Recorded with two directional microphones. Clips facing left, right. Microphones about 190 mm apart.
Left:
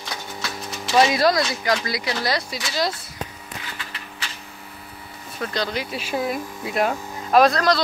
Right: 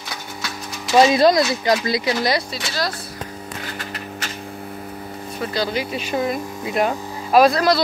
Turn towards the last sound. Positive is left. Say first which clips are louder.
# right 2 dB
turn(degrees=-5)  # may be behind; listen again after turning